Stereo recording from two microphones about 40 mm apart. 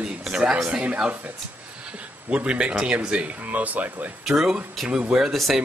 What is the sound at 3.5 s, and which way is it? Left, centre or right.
Speech, right.